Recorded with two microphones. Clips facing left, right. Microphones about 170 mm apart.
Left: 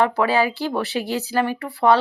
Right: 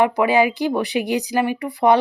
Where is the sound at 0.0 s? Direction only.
15° right (ahead or behind).